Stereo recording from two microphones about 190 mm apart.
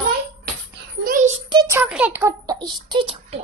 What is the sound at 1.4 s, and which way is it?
A woman's voice, 20° right (ahead or behind).